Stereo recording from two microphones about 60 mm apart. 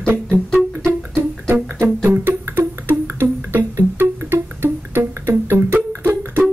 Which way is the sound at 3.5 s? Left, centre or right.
Right.